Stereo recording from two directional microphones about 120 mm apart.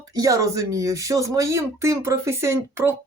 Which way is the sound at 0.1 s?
30° right (ahead or behind).